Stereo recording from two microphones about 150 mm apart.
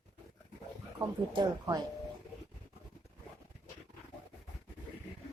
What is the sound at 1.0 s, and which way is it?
Speech, 25° right (ahead or behind).